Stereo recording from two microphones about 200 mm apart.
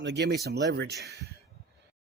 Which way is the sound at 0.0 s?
60° right (ahead or behind).